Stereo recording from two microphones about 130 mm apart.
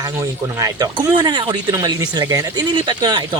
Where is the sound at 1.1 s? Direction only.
35° right (ahead or behind).